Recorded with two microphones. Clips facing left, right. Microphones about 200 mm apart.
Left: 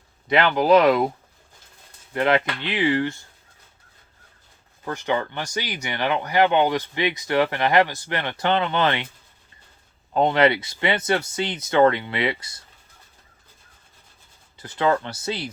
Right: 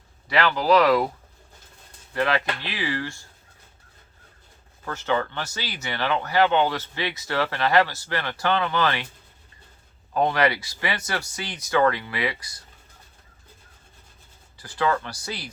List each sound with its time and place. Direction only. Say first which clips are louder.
0.3 s speech: left 3 dB; 20° left (ahead or behind)
2.1 s speech: left 4 dB; 20° left (ahead or behind)
4.9 s speech: left 1 dB; 15° left (ahead or behind)
10.2 s speech: left 3 dB; 25° left (ahead or behind)
14.6 s speech: left 3 dB; 20° left (ahead or behind)